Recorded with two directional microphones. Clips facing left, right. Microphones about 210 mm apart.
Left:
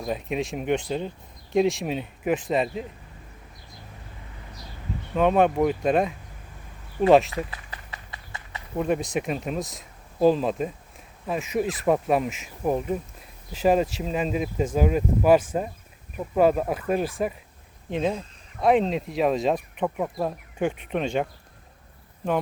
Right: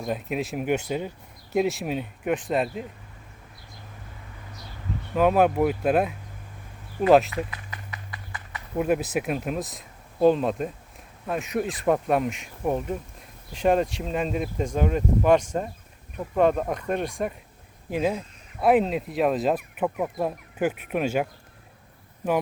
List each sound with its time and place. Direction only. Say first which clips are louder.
0.0 s speech: even; centre (ahead or behind)
5.1 s speech: even; 5° right (ahead or behind)
7.7 s run: right 1 dB; 25° left (ahead or behind)
8.7 s speech: right 1 dB; 5° right (ahead or behind)